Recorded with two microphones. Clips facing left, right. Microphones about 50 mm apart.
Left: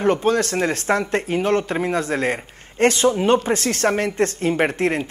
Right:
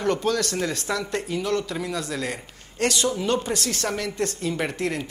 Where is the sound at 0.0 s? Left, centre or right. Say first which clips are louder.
Left 5 dB; left.